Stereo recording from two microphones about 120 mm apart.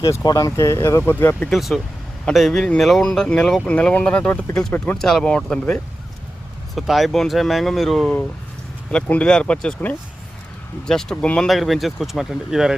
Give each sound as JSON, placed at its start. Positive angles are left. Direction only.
{"t": 0.0, "sound": "speech", "side_deg": 30}
{"t": 1.5, "sound": "speech", "side_deg": 0}